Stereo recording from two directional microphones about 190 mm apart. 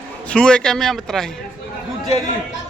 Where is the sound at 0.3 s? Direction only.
5° left (ahead or behind).